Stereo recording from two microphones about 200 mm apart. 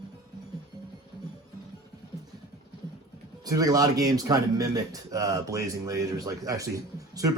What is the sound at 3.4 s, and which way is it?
A man's voice, 20° right (ahead or behind).